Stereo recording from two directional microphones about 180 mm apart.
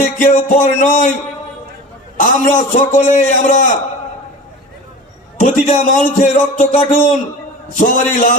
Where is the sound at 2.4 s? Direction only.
45° left (ahead or behind).